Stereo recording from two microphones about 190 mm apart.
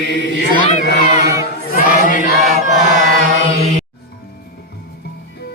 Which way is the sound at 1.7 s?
45° left (ahead or behind).